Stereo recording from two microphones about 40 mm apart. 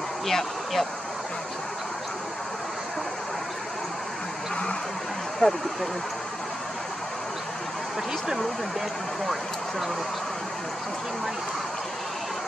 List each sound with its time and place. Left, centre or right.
0.3 s speech: centre
5.4 s speech: left
9.2 s speech: centre